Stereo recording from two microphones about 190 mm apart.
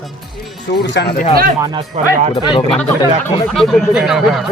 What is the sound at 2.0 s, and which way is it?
Music, 35° right (ahead or behind).